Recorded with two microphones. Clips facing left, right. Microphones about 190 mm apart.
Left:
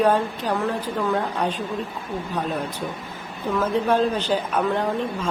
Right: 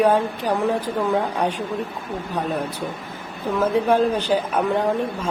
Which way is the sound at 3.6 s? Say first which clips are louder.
Right 3 dB; 10° right (ahead or behind).